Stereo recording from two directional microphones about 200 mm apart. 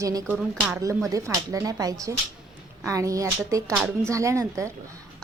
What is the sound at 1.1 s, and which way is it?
A woman's voice, 15° right (ahead or behind).